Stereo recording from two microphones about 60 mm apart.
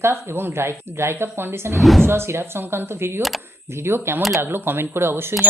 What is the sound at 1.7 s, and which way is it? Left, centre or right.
Speech, centre.